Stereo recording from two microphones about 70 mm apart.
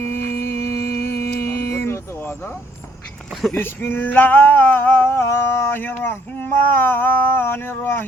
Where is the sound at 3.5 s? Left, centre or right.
Left.